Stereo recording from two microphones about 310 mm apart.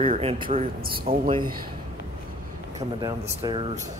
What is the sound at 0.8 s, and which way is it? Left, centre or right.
Speech, right.